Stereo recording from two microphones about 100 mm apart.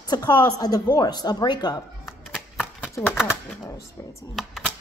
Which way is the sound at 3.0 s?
10° left (ahead or behind).